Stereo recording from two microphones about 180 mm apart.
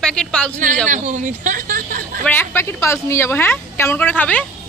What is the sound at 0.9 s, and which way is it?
Speech, 45° right (ahead or behind).